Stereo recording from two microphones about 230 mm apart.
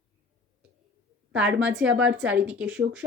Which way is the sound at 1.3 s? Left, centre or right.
Centre.